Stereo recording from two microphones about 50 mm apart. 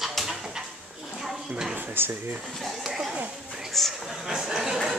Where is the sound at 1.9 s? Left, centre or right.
Right.